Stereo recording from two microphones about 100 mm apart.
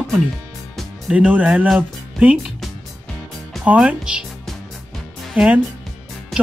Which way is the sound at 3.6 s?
10° right (ahead or behind).